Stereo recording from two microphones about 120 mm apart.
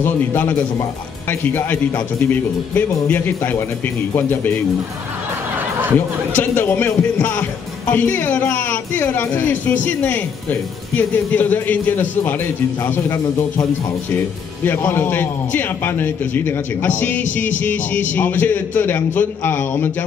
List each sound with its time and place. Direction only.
0.0 s a man's voice: 15° left (ahead or behind)
5.9 s a man's voice: 15° left (ahead or behind)